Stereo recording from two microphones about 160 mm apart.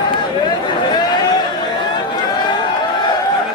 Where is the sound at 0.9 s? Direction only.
25° left (ahead or behind).